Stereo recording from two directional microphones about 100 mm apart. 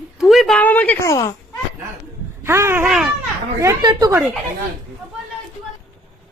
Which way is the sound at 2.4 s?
25° right (ahead or behind).